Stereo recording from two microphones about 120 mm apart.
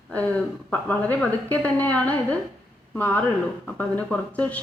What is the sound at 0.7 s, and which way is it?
A woman's voice, 10° left (ahead or behind).